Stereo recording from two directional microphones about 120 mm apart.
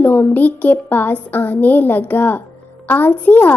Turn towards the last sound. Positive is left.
turn(degrees=15)  # may be behind; listen again after turning